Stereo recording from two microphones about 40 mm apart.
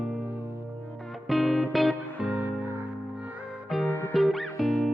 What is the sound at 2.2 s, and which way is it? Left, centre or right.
Music, right.